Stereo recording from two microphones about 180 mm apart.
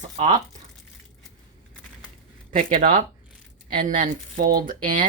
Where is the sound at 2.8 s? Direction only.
50° right (ahead or behind).